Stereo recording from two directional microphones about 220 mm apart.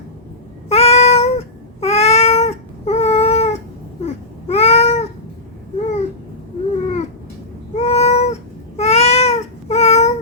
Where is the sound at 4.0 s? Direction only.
30° left (ahead or behind).